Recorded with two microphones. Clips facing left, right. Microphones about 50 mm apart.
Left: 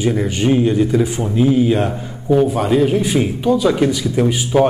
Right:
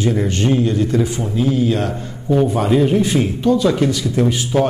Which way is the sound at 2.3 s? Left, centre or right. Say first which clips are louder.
Left 1 dB; centre.